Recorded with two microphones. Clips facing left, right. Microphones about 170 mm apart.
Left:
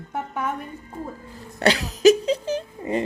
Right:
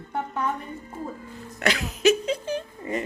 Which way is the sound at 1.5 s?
35° left (ahead or behind).